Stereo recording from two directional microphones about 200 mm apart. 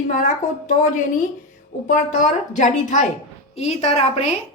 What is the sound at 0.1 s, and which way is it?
A woman's voice, 40° left (ahead or behind).